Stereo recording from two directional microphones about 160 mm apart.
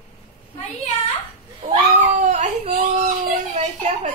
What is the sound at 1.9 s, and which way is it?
Speech, 45° right (ahead or behind).